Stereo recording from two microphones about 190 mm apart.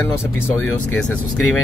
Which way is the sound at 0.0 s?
10° left (ahead or behind).